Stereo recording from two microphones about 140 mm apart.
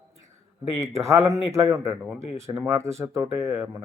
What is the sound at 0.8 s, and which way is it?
Speech, 20° right (ahead or behind).